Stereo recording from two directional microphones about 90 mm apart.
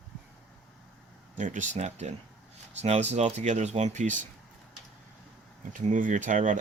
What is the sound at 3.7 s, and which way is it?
Speech, 90° right.